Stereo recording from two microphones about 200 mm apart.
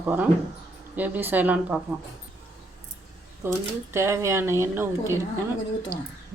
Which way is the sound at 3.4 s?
10° right (ahead or behind).